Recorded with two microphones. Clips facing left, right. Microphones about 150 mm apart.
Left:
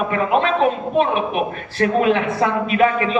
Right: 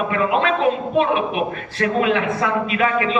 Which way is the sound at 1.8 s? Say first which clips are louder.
Left 2 dB; 40° left (ahead or behind).